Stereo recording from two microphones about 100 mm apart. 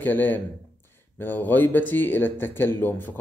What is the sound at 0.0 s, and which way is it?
A man's voice, 20° left (ahead or behind).